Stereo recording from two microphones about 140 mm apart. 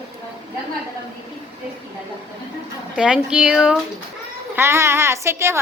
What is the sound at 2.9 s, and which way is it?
Speech, 5° right (ahead or behind).